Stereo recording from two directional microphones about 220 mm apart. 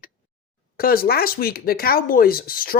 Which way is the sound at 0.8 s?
40° left (ahead or behind).